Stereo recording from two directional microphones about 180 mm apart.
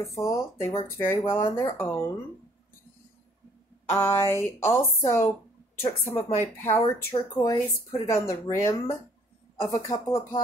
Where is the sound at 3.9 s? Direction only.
15° left (ahead or behind).